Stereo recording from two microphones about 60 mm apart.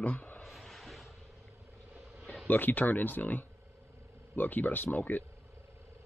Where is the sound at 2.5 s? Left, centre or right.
Left.